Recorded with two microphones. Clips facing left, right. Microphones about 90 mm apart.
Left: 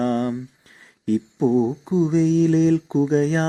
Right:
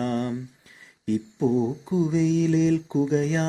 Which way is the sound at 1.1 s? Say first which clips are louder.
Left 4 dB; 35° left (ahead or behind).